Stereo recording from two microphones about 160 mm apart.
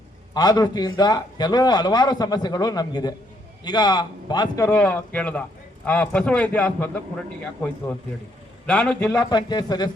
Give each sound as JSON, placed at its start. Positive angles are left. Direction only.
{"t": 0.3, "sound": "a man's voice", "side_deg": 25}
{"t": 8.6, "sound": "a man's voice", "side_deg": 5}
{"t": 9.3, "sound": "a man's voice", "side_deg": 25}